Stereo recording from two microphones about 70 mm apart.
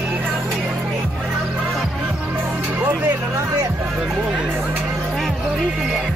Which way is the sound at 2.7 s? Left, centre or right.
Right.